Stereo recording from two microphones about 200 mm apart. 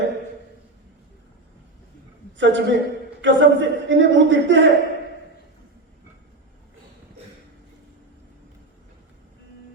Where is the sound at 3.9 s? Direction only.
65° right (ahead or behind).